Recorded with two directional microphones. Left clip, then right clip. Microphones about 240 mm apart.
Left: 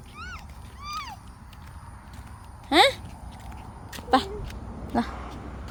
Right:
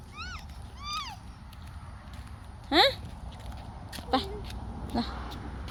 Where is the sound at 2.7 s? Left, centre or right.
Centre.